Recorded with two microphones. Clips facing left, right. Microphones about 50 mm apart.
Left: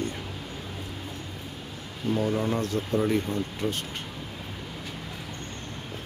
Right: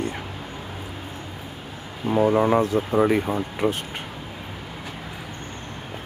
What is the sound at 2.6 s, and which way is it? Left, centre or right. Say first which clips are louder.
Speech: right 6 dB; centre.